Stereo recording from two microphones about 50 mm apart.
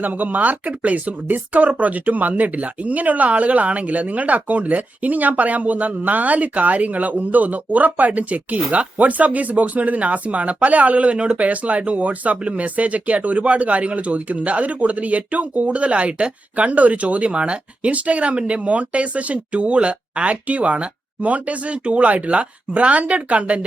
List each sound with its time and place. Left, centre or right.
0.0 s speech: right